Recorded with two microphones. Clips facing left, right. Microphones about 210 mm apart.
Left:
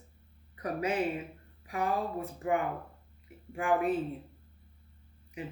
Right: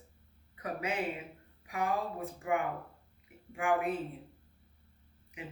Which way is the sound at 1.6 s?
35° left (ahead or behind).